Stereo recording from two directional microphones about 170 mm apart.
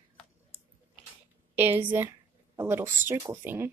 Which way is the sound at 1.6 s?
10° right (ahead or behind).